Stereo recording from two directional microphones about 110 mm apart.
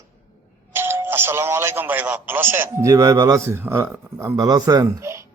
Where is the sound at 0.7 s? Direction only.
20° right (ahead or behind).